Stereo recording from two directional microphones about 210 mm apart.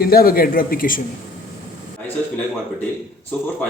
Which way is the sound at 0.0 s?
45° left (ahead or behind).